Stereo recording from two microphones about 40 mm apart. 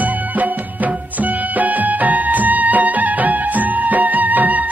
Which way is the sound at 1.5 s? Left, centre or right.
Right.